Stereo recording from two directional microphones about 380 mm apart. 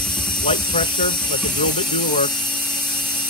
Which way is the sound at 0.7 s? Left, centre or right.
Centre.